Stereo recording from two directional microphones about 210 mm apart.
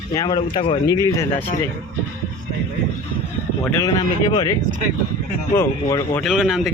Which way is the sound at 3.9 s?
20° left (ahead or behind).